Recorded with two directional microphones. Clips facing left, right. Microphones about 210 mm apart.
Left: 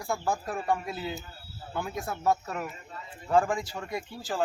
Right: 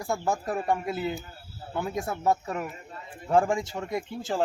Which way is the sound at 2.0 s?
25° right (ahead or behind).